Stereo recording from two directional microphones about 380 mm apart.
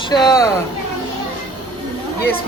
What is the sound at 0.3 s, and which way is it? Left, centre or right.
Speech, centre.